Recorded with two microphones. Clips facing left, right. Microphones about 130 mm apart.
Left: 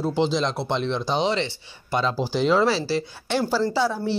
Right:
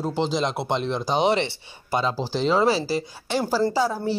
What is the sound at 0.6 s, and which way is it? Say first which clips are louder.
Speech: even; 5° right (ahead or behind).